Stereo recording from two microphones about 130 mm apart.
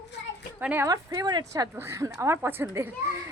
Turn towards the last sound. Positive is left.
turn(degrees=-20)  # may be behind; listen again after turning